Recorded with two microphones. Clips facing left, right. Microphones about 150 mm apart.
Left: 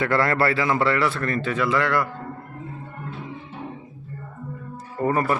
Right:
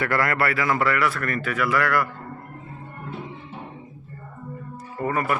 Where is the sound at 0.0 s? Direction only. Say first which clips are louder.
Left 2 dB; 25° left (ahead or behind).